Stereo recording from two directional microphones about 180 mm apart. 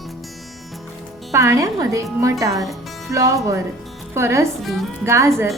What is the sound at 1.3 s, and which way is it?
Speech, 15° right (ahead or behind).